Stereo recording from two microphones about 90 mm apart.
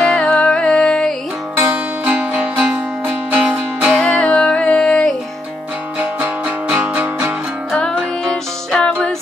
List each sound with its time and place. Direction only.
0.0 s music: 10° left (ahead or behind)
2.0 s music: 15° right (ahead or behind)
4.0 s music: 10° left (ahead or behind)
5.9 s music: 20° right (ahead or behind)
7.7 s music: 5° left (ahead or behind)